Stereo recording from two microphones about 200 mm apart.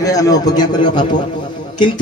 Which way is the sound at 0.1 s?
15° left (ahead or behind).